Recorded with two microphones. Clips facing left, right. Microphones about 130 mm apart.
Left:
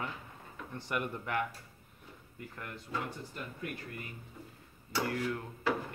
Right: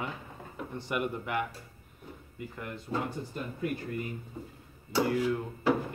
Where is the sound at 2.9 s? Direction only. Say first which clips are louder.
Right 6 dB; 30° right (ahead or behind).